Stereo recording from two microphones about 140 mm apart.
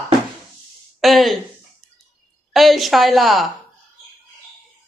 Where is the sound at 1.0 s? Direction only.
Centre (ahead or behind).